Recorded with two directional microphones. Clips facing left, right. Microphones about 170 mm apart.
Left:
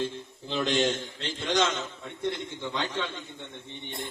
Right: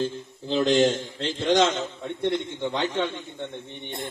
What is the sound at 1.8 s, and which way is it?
A man's voice, 25° right (ahead or behind).